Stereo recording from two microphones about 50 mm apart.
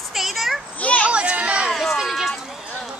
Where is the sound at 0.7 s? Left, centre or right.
Left.